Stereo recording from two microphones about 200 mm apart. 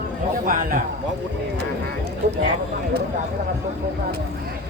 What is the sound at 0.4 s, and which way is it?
Speech, 45° right (ahead or behind).